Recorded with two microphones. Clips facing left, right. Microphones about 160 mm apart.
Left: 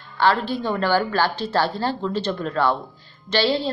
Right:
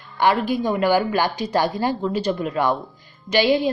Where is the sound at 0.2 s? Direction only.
15° right (ahead or behind).